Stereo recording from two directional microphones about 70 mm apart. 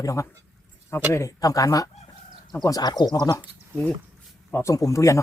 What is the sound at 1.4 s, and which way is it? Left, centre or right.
Speech, left.